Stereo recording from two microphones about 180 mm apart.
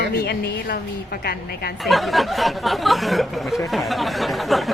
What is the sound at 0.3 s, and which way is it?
A woman's voice, 65° left (ahead or behind).